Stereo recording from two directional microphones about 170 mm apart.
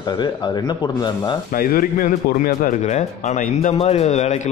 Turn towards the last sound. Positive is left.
turn(degrees=40)  # may be behind; listen again after turning